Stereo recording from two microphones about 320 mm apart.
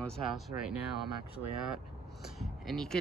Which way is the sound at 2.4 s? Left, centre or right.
Centre.